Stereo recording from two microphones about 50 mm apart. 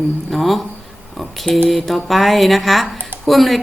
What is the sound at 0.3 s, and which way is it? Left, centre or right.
A woman's voice, centre.